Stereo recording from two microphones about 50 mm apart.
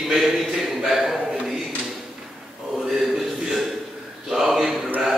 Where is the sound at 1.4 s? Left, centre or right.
Centre.